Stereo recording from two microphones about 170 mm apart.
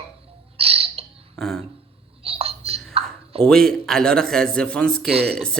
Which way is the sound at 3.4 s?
5° left (ahead or behind).